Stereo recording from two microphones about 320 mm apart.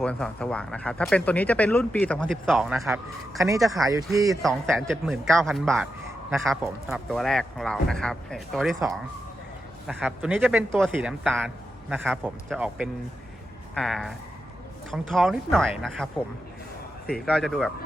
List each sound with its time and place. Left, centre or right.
0.0 s speech: centre
3.8 s speech: centre
4.4 s speech: centre